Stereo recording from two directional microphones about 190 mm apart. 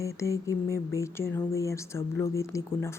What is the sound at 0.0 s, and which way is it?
Speech, 15° left (ahead or behind).